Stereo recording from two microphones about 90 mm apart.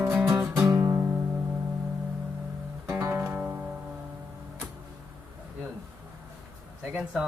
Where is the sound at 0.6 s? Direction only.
35° right (ahead or behind).